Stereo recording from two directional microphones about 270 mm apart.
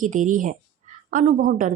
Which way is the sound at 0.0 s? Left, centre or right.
Right.